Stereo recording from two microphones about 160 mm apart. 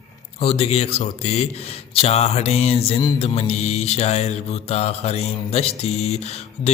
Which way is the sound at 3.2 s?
40° left (ahead or behind).